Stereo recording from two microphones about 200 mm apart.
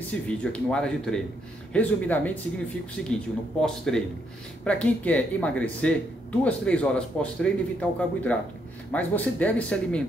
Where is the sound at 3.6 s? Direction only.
Centre (ahead or behind).